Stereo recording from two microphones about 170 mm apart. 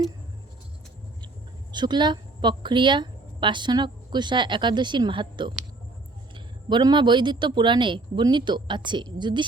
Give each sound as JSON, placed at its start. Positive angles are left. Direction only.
{"t": 1.7, "sound": "a woman's voice", "side_deg": -25}